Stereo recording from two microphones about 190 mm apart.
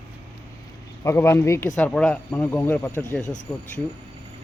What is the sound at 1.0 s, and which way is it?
Speech, 15° left (ahead or behind).